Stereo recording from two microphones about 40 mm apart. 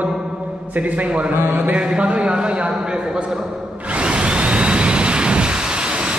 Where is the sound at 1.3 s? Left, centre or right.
Right.